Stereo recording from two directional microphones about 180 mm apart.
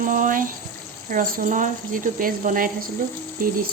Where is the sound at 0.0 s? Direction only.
50° right (ahead or behind).